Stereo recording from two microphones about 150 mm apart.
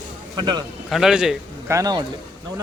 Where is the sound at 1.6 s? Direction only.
25° right (ahead or behind).